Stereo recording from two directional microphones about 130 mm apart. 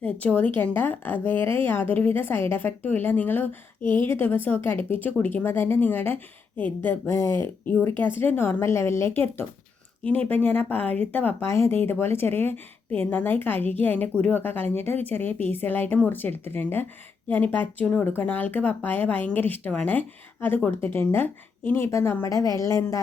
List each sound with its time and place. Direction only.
0.0 s speech: 10° left (ahead or behind)
10.2 s a woman's voice: 15° left (ahead or behind)